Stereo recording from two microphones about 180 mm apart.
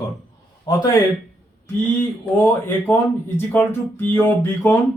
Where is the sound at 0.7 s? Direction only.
20° left (ahead or behind).